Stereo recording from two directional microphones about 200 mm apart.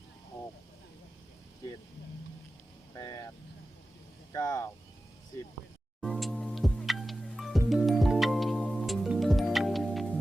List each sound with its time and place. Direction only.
2.9 s vehicle: 20° left (ahead or behind)
4.3 s speech: 20° left (ahead or behind)
6.0 s music: centre (ahead or behind)